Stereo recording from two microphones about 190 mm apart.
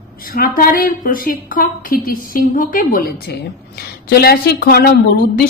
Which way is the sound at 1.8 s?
50° left (ahead or behind).